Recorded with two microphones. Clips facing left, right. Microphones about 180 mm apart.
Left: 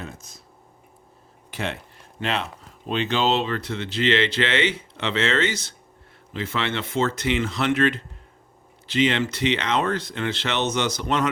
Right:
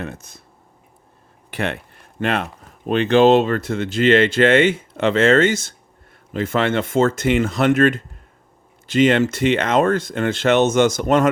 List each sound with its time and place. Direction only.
0.0 s speech: 60° right (ahead or behind)
1.5 s speech: 60° right (ahead or behind)